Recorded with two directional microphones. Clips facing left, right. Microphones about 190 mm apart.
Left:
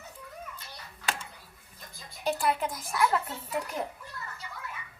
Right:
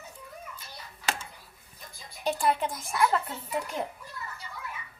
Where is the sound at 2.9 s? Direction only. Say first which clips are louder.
Right 1 dB; 5° left (ahead or behind).